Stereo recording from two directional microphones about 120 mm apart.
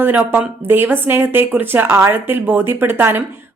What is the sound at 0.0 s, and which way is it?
Speech, 15° right (ahead or behind).